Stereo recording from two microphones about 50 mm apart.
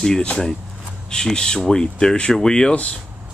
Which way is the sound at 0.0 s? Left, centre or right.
Centre.